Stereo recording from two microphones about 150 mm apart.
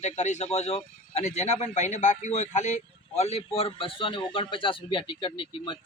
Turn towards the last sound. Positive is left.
turn(degrees=35)  # may be behind; listen again after turning